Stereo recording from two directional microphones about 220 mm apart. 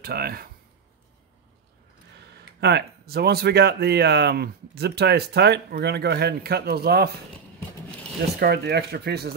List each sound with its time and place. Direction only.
0.0 s speech: 45° right (ahead or behind)
2.3 s speech: 50° right (ahead or behind)
8.4 s speech: 45° right (ahead or behind)